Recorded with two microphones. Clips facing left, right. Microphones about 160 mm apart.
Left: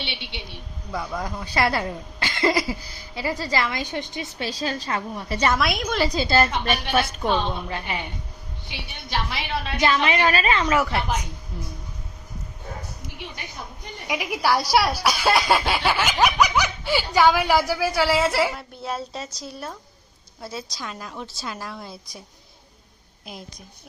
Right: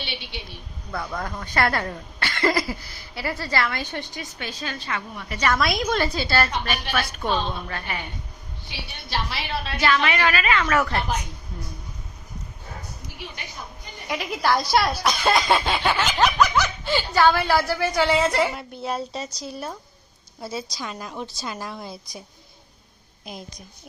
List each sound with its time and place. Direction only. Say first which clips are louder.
0.9 s speech: left 1 dB; 10° left (ahead or behind)
4.4 s a woman's voice: left 6 dB; 35° left (ahead or behind)
5.5 s a woman's voice: right 1 dB; 5° left (ahead or behind)
6.1 s a woman's voice: left 3 dB; 20° left (ahead or behind)
9.0 s a woman's voice: left 1 dB; 20° left (ahead or behind)
10.7 s speech: left 1 dB; 10° left (ahead or behind)
14.1 s a woman's voice: even; 10° left (ahead or behind)
23.2 s a woman's voice: right 1 dB; centre (ahead or behind)